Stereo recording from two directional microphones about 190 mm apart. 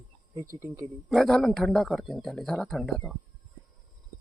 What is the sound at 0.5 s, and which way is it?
Speech, 15° right (ahead or behind).